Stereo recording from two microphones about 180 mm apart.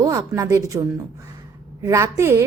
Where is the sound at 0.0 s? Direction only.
20° right (ahead or behind).